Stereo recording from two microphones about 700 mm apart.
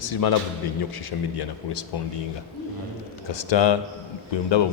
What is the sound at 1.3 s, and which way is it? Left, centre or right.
Speech, left.